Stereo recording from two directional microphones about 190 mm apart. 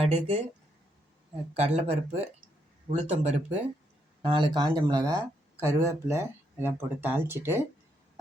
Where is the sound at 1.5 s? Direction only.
35° right (ahead or behind).